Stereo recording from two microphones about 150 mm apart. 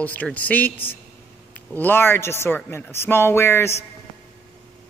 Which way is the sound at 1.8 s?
15° left (ahead or behind).